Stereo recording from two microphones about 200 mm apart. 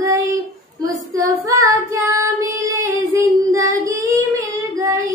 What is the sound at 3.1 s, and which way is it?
Child singing, 15° right (ahead or behind).